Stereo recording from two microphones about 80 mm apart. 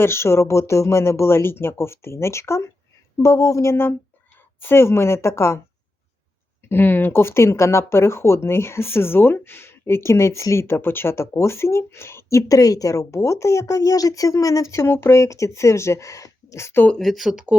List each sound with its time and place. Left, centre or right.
0.0 s speech: left
6.6 s speech: left
17.0 s speech: centre